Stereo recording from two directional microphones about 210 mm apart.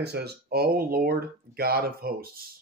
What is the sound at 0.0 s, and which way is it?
Speech, 50° right (ahead or behind).